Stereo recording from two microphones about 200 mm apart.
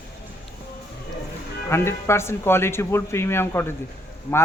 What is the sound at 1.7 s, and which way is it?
Speech, 15° left (ahead or behind).